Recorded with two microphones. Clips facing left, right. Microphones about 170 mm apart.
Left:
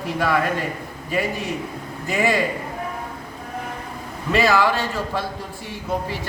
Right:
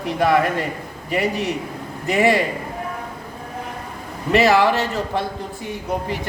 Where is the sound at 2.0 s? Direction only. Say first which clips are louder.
Right 4 dB; 20° right (ahead or behind).